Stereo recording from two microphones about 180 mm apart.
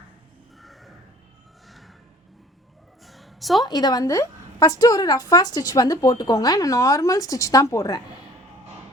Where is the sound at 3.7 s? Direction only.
20° left (ahead or behind).